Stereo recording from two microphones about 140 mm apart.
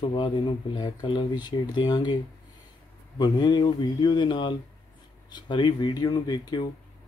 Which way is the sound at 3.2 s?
30° left (ahead or behind).